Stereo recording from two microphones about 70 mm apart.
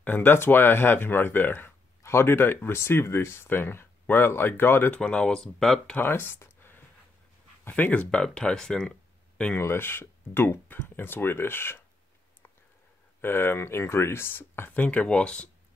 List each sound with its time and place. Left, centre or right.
0.0 s speech: left
5.0 s speech: centre
5.9 s speech: left; by 8.9 s centre
9.6 s speech: left
13.2 s speech: left; by 15.5 s centre